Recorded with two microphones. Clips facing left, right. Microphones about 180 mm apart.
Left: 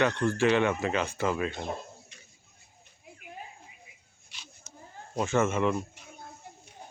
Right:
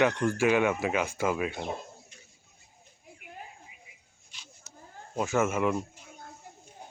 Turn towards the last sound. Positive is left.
turn(degrees=70)  # may be behind; listen again after turning